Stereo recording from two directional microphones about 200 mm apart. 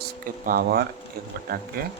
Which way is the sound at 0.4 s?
50° right (ahead or behind).